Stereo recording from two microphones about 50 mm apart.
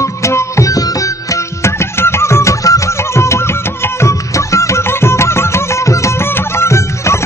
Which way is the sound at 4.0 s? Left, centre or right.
Left.